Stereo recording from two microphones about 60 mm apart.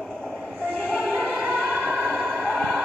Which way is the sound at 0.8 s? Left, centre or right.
Centre.